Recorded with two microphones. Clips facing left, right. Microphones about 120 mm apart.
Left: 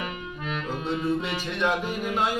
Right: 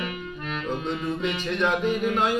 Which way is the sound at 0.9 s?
10° left (ahead or behind).